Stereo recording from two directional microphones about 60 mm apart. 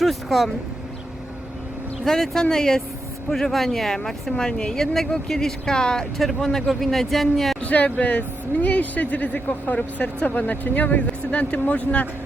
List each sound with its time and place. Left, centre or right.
0.0 s speech: centre
2.0 s speech: centre
7.6 s speech: left